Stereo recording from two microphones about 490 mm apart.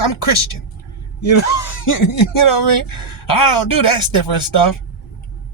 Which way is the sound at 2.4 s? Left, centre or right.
Left.